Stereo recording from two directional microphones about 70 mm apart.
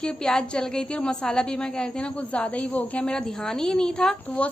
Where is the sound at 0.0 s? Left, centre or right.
Centre.